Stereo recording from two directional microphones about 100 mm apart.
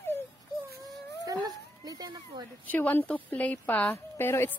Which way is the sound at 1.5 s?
40° right (ahead or behind).